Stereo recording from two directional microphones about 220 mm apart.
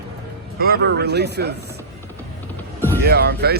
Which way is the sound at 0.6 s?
45° right (ahead or behind).